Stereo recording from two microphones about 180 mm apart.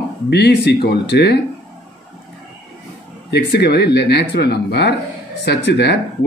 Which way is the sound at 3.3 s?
65° left (ahead or behind).